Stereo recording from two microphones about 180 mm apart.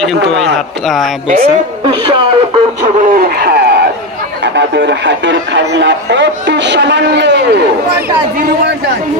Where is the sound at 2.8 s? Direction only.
45° right (ahead or behind); by 7.5 s 75° right (ahead or behind).